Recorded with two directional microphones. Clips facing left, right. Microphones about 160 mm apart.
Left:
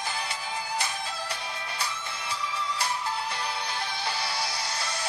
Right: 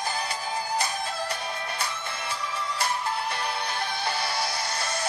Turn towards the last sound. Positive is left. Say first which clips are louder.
# right 3 dB
turn(degrees=-50)  # may be behind; listen again after turning